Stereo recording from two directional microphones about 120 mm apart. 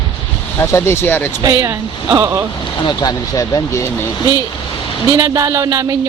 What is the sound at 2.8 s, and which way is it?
Speech, 30° left (ahead or behind).